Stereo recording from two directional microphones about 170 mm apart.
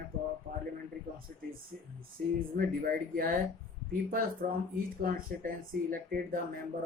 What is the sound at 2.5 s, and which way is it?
Speech, 60° right (ahead or behind).